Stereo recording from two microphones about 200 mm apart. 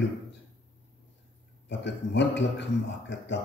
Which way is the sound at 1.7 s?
60° left (ahead or behind).